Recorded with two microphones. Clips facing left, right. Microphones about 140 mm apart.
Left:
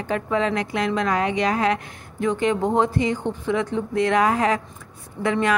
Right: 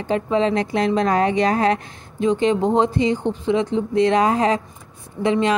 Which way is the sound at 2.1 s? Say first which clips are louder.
Right 4 dB; 20° right (ahead or behind).